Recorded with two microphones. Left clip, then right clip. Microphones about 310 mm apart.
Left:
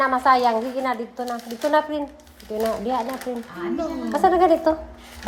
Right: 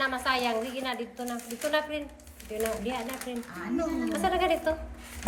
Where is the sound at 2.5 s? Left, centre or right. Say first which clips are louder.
Left 7 dB; centre.